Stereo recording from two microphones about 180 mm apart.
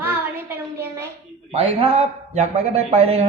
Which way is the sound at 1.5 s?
30° right (ahead or behind).